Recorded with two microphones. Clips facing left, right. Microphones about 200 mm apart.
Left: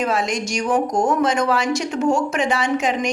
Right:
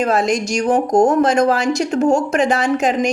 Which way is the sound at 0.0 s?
40° right (ahead or behind).